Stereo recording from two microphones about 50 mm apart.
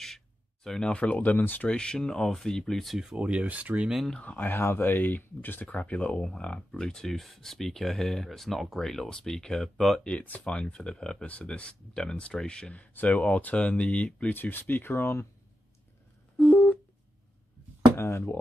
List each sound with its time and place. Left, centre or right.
0.7 s speech: centre; by 1.7 s left
1.7 s speech: centre
3.2 s speech: right
4.2 s speech: left
4.5 s speech: left
5.7 s speech: left; by 10.0 s centre
10.2 s speech: left
10.5 s speech: centre
14.3 s speech: left
16.3 s a sound: left
17.9 s speech: left